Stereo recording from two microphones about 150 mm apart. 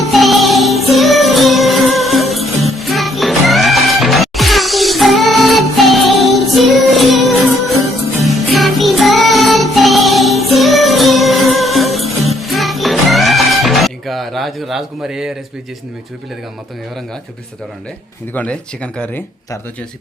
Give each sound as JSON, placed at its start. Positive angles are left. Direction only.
{"t": 0.0, "sound": "music", "side_deg": 0}
{"t": 18.3, "sound": "speech", "side_deg": 10}